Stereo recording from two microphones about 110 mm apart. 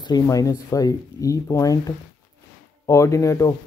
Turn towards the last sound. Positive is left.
turn(degrees=30)  # may be behind; listen again after turning